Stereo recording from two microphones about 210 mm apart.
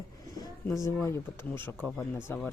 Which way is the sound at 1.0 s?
10° left (ahead or behind).